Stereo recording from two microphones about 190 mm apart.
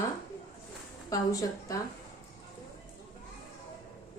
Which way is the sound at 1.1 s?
20° left (ahead or behind).